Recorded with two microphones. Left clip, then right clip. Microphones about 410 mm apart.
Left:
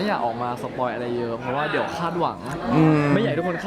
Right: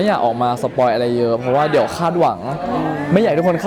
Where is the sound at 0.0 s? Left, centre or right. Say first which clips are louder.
Right 8 dB; right.